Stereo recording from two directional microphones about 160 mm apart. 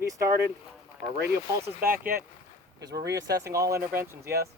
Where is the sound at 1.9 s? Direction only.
65° right (ahead or behind).